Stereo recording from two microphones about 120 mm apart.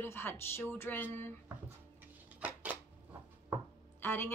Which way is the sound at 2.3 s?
15° right (ahead or behind).